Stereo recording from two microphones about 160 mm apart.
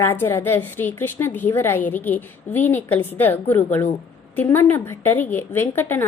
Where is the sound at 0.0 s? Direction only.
15° left (ahead or behind).